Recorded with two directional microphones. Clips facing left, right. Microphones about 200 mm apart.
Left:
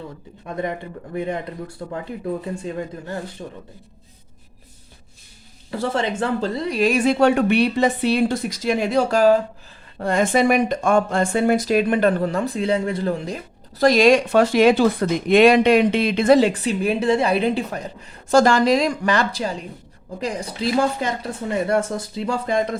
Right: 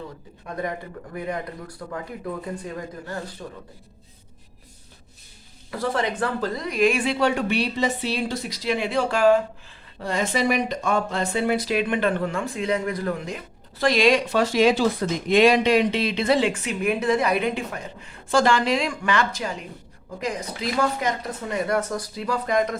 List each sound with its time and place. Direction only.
0.4 s speech: 25° left (ahead or behind)
5.7 s a woman's voice: 25° left (ahead or behind)
10.0 s speech: 50° left (ahead or behind); by 22.8 s 30° left (ahead or behind)